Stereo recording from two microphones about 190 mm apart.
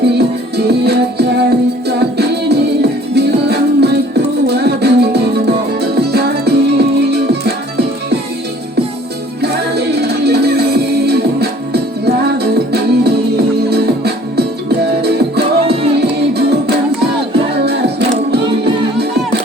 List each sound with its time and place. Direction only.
0.0 s music: 60° right (ahead or behind)
9.4 s music: 60° right (ahead or behind)
15.6 s music: 30° right (ahead or behind)
16.4 s music: 60° right (ahead or behind)